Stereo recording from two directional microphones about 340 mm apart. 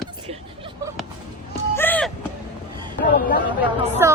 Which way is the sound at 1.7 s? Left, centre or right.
Centre.